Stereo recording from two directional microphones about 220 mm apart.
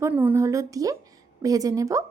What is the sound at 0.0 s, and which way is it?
Speech, 10° right (ahead or behind).